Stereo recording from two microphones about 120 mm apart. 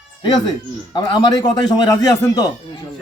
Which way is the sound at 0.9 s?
40° left (ahead or behind).